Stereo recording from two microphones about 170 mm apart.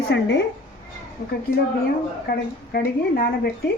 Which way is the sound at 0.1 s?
90° left.